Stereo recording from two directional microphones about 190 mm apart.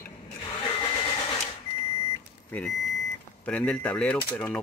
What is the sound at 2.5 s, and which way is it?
Vehicle, centre (ahead or behind).